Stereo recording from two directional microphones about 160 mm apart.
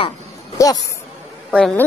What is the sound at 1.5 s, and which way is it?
Speech, 5° left (ahead or behind).